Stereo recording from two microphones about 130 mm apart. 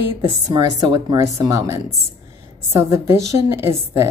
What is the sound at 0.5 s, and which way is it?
Speech, 35° right (ahead or behind).